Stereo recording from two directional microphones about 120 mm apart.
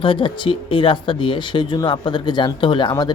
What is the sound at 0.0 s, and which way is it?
Speech, 45° left (ahead or behind).